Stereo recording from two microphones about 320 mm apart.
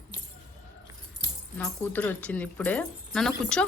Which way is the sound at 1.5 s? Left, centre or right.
Centre.